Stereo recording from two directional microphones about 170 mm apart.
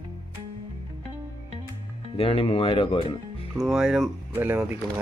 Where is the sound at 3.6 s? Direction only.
Centre (ahead or behind).